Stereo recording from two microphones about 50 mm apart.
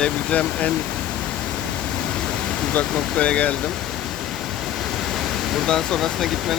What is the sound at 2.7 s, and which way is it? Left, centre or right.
Speech, left.